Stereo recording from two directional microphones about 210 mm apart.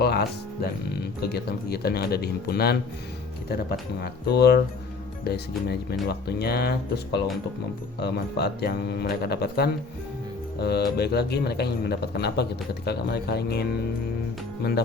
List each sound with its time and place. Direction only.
0.0 s a man's voice: 50° left (ahead or behind)